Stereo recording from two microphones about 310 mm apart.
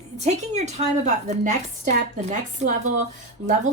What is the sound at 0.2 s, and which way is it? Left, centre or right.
Speech, right.